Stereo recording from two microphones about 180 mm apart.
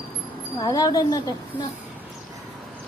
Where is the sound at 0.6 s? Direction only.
20° left (ahead or behind).